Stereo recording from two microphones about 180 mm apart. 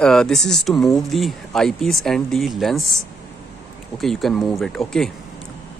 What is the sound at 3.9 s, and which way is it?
Speech, centre (ahead or behind).